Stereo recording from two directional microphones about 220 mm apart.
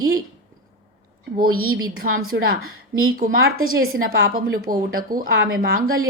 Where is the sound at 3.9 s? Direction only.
45° right (ahead or behind).